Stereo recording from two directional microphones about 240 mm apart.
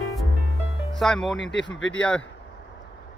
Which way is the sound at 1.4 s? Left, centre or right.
Left.